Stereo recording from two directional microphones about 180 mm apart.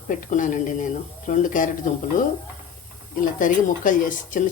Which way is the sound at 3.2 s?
50° left (ahead or behind).